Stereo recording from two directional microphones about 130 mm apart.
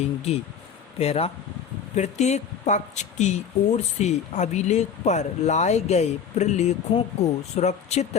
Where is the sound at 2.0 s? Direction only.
60° left (ahead or behind).